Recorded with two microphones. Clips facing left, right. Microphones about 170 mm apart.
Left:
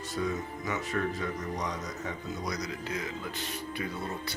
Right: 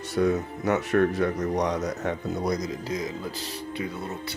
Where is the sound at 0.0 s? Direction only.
70° right (ahead or behind).